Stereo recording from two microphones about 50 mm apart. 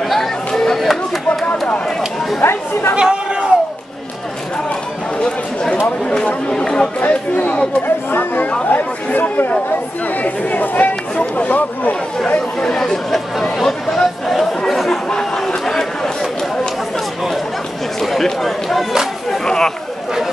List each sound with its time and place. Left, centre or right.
0.6 s chatter: centre
2.4 s speech: left
3.0 s a sound: centre
5.2 s a sound: centre
6.0 s chatter: centre
7.0 s speech: left
7.8 s chatter: left
8.7 s speech: left
12.5 s speech: centre
14.7 s chatter: centre
15.0 s chatter: centre
18.0 s speech: centre
19.4 s a sound: centre